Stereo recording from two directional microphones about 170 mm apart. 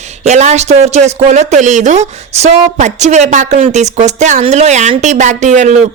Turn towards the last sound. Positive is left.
turn(degrees=-45)  # may be behind; listen again after turning